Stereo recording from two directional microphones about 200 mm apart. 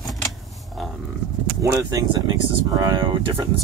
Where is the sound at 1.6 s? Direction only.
15° right (ahead or behind).